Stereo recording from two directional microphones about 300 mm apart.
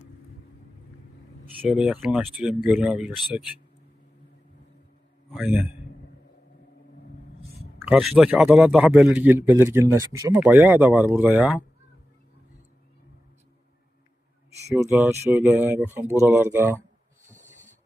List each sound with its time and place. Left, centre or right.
1.6 s a man's voice: centre
5.3 s a man's voice: centre
7.8 s a man's voice: centre
14.7 s speech: centre
17.3 s a sound: right